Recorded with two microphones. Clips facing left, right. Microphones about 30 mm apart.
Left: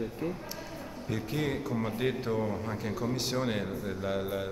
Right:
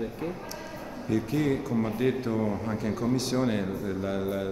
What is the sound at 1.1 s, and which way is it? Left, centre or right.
A man's voice, centre.